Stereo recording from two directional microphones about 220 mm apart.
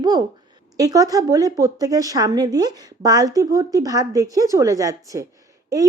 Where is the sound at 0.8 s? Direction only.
15° right (ahead or behind).